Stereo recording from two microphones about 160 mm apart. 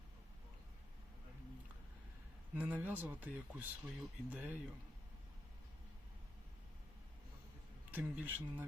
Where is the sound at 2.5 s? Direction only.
10° right (ahead or behind).